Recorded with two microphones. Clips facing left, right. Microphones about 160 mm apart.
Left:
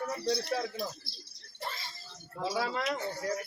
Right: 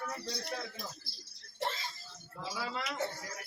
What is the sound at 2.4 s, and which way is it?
Speech, 90° left.